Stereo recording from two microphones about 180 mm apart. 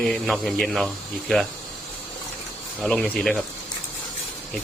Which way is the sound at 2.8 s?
5° left (ahead or behind).